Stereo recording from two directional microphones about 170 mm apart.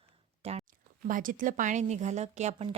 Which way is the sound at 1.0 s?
50° right (ahead or behind).